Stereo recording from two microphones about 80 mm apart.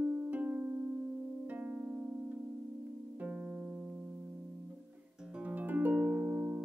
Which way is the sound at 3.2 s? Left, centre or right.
Centre.